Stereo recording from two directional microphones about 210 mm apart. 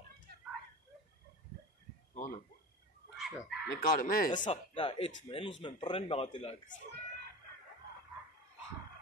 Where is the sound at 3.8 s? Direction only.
40° left (ahead or behind).